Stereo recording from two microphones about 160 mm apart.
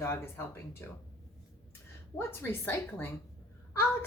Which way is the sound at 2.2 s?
15° left (ahead or behind).